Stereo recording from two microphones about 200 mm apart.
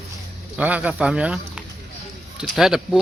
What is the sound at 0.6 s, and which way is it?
Speech, 5° right (ahead or behind).